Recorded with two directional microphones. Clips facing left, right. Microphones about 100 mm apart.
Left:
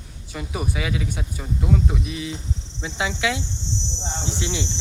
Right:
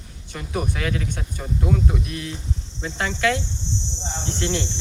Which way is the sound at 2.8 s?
5° left (ahead or behind).